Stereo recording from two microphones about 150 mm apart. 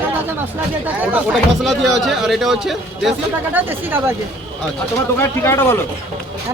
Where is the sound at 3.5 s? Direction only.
15° right (ahead or behind).